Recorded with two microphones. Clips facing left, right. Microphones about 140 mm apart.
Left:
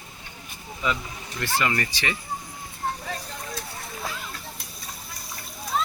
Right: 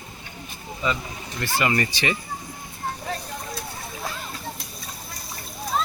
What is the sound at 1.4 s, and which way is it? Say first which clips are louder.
Speech: right 2 dB; 5° right (ahead or behind).